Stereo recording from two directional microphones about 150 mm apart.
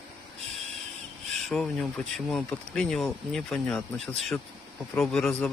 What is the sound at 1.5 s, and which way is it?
Speech, centre (ahead or behind).